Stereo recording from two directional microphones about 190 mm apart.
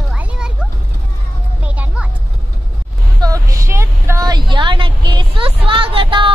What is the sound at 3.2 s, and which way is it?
Vehicle, 20° right (ahead or behind).